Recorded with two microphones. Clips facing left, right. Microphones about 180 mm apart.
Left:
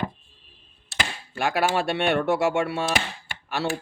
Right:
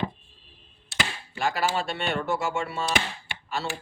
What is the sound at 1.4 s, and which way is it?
Speech, 60° left (ahead or behind).